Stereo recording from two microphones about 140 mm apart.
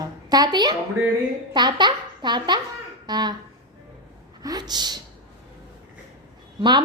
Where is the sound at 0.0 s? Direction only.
30° right (ahead or behind).